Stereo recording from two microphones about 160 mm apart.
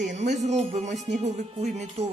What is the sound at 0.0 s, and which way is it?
A woman's voice, 50° right (ahead or behind).